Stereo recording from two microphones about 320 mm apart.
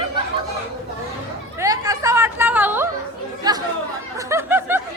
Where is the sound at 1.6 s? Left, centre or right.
Centre.